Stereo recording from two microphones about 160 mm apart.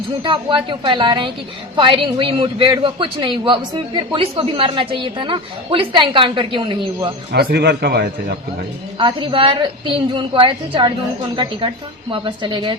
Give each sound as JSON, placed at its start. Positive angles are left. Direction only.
{"t": 0.2, "sound": "a woman's voice", "side_deg": -30}
{"t": 7.3, "sound": "a man's voice", "side_deg": -85}
{"t": 9.0, "sound": "a woman's voice", "side_deg": -30}
{"t": 12.1, "sound": "a woman's voice", "side_deg": -30}